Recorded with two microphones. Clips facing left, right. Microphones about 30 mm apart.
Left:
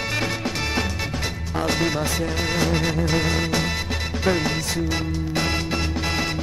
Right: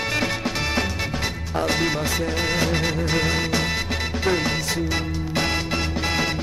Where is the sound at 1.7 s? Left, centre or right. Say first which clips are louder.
Left 1 dB; centre.